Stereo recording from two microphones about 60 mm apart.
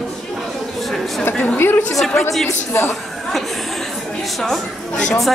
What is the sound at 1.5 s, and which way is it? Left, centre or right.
Speech, left.